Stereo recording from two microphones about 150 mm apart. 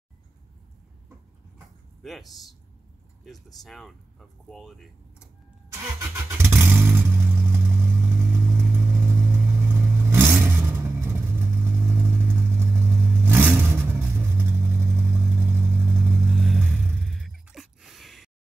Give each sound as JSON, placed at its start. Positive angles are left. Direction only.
{"t": 2.0, "sound": "speech", "side_deg": 0}
{"t": 3.6, "sound": "speech", "side_deg": 0}
{"t": 5.7, "sound": "vehicle", "side_deg": -15}
{"t": 16.3, "sound": "vehicle", "side_deg": 0}
{"t": 16.8, "sound": "music", "side_deg": 0}